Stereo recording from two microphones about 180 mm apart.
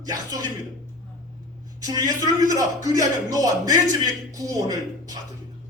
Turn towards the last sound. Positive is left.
turn(degrees=-20)  # may be behind; listen again after turning